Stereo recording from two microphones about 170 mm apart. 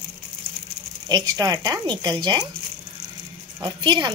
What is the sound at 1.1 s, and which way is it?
Speech, 25° right (ahead or behind).